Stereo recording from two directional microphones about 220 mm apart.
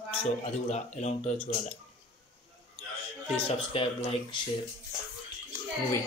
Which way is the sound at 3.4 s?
25° left (ahead or behind).